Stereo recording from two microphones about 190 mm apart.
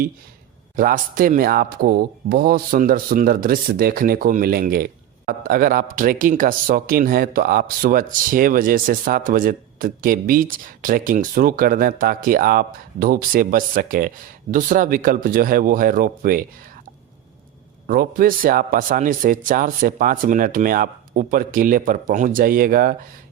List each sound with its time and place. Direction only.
0.8 s speech: 45° right (ahead or behind)
17.8 s speech: 50° right (ahead or behind)